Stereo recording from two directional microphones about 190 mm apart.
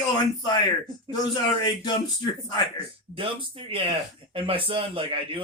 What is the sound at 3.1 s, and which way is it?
Speech, 30° right (ahead or behind).